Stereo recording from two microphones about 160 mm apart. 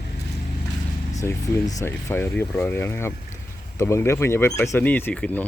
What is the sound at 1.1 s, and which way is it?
Speech, 15° left (ahead or behind).